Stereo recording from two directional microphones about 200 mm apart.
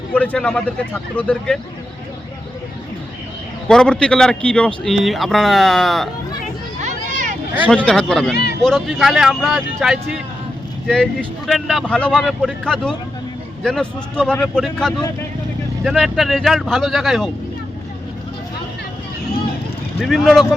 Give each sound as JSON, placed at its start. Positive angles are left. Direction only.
{"t": 0.1, "sound": "speech", "side_deg": 5}
{"t": 3.7, "sound": "a man's voice", "side_deg": 5}
{"t": 6.7, "sound": "children playing", "side_deg": -35}
{"t": 7.7, "sound": "a man's voice", "side_deg": 5}
{"t": 20.0, "sound": "a man's voice", "side_deg": 0}